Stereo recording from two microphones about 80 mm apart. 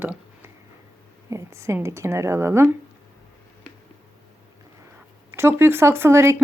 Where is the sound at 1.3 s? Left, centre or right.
Right.